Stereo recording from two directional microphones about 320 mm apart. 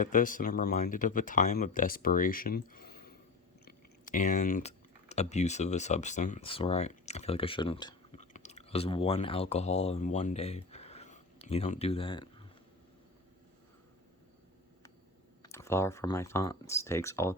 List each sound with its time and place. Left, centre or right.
0.0 s speech: left
15.4 s speech: centre